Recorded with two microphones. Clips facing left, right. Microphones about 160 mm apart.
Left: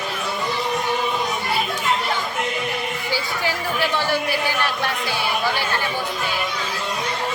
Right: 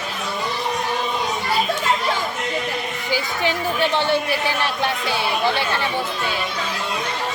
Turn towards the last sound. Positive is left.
turn(degrees=-25)  # may be behind; listen again after turning